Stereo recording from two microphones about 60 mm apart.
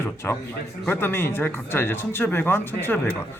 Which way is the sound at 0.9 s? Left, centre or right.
Left.